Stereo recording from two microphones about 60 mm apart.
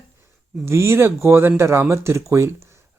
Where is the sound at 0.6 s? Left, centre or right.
Right.